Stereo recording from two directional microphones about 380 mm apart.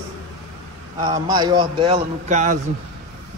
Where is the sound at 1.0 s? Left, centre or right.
Centre.